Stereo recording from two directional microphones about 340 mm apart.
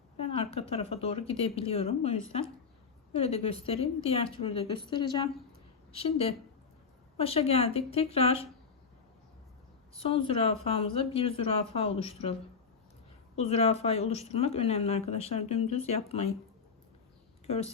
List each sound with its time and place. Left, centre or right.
0.2 s speech: centre
9.9 s speech: centre
17.4 s speech: centre